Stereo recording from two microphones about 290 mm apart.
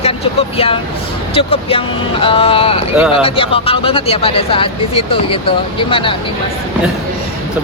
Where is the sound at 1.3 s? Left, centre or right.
Centre.